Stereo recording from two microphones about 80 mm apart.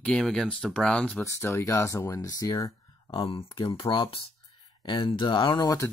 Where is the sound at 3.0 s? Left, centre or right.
Left.